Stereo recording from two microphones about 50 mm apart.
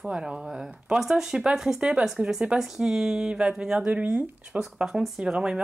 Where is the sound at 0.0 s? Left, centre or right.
Centre.